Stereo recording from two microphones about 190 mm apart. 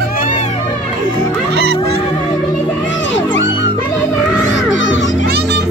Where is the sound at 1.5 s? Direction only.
60° right (ahead or behind).